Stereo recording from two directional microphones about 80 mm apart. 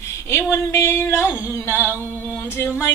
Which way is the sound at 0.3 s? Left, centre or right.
Left.